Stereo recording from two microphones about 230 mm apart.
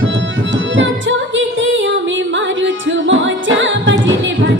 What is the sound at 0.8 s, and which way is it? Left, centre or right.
Music, right.